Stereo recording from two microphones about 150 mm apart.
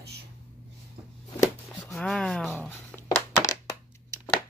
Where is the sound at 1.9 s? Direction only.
5° left (ahead or behind).